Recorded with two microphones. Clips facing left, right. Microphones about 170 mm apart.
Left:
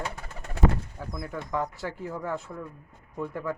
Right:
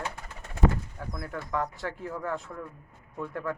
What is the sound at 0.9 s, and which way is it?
Speech, centre (ahead or behind).